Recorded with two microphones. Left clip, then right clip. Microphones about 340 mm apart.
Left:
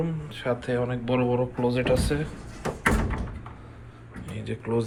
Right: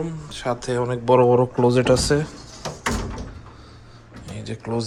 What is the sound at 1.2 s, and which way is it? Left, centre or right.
Speech, right.